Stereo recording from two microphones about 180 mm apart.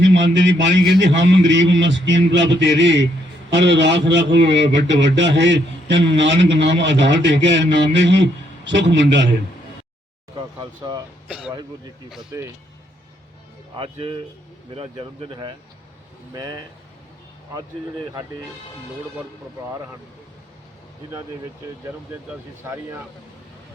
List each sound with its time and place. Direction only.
0.0 s a man's voice: 85° right
10.3 s speech: 25° right (ahead or behind)
11.3 s speech: 5° right (ahead or behind)
13.7 s speech: 30° right (ahead or behind)
22.6 s speech: 15° right (ahead or behind)